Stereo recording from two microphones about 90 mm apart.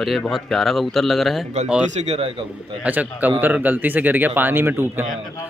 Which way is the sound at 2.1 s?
90° right.